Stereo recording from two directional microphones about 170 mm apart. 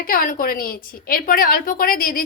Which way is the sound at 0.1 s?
55° left (ahead or behind).